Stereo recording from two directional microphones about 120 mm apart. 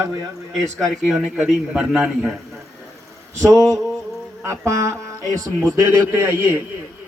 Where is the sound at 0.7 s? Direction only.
5° left (ahead or behind).